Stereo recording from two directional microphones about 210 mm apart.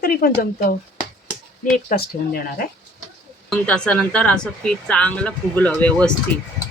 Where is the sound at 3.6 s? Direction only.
5° left (ahead or behind).